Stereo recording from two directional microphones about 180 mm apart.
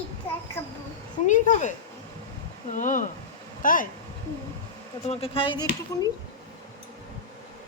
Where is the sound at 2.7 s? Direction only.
45° left (ahead or behind).